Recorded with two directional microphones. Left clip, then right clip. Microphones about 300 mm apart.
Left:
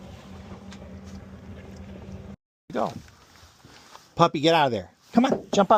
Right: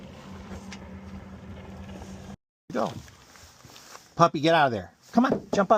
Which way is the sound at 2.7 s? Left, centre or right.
Centre.